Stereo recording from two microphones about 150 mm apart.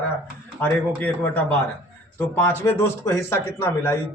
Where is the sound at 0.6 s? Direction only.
10° left (ahead or behind).